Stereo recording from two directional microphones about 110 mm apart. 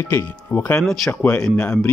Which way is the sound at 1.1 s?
15° left (ahead or behind).